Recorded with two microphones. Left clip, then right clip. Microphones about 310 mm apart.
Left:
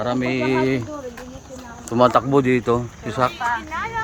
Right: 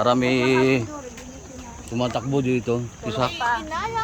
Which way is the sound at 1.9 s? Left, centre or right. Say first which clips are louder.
Left 10 dB; centre.